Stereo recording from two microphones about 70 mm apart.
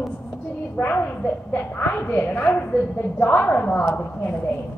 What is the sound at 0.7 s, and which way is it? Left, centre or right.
A woman's voice, left.